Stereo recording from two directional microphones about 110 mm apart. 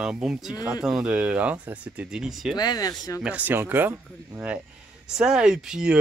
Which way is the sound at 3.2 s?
15° right (ahead or behind).